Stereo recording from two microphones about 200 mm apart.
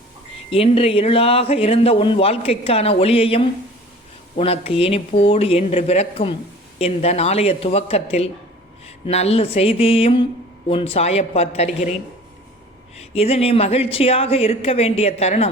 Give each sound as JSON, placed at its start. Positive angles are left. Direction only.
{"t": 0.5, "sound": "a man's voice", "side_deg": 30}
{"t": 13.0, "sound": "a man's voice", "side_deg": 30}